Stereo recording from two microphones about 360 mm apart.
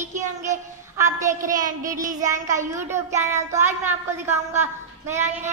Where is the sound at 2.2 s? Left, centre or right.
Centre.